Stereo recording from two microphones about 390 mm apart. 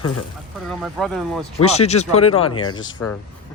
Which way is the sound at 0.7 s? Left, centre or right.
Centre.